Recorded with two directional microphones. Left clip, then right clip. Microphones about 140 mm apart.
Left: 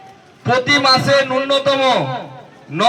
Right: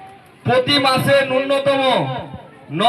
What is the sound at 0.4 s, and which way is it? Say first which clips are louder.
A man's voice: left 2 dB; 25° right (ahead or behind).